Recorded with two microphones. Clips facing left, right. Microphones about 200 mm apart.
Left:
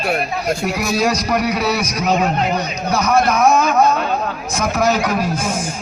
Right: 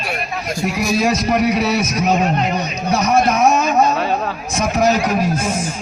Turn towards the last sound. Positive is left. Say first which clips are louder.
# right 1 dB
turn(degrees=-20)  # may be behind; listen again after turning